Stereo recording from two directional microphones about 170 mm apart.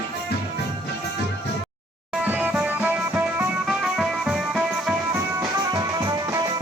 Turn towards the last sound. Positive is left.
turn(degrees=-20)  # may be behind; listen again after turning